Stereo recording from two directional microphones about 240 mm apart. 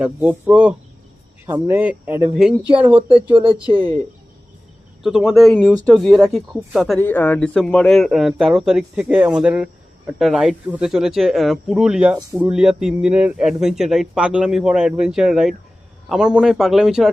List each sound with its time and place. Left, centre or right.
0.0 s speech: centre
3.3 s speech: right
5.0 s speech: centre